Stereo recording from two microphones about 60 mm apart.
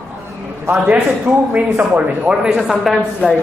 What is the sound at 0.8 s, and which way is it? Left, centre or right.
Speech, right.